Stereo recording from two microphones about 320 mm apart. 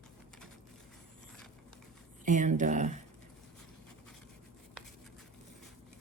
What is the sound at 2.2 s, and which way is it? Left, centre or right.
Speech, right.